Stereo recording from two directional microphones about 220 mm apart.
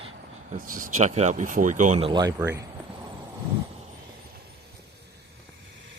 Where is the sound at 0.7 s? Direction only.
40° right (ahead or behind).